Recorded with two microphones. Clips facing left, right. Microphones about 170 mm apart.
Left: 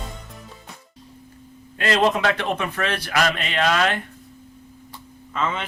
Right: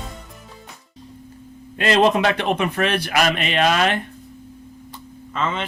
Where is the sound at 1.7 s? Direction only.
20° right (ahead or behind).